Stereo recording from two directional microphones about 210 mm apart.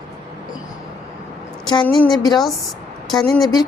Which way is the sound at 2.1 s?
20° left (ahead or behind).